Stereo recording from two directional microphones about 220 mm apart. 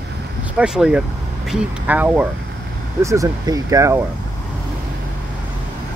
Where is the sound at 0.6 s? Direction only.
5° right (ahead or behind).